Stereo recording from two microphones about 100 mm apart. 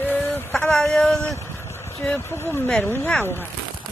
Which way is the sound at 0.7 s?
5° left (ahead or behind).